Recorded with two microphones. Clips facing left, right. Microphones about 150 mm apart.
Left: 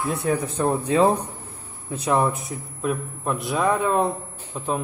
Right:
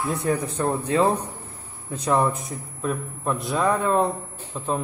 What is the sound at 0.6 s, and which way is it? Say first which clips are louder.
A man's voice: left 3 dB; 15° left (ahead or behind).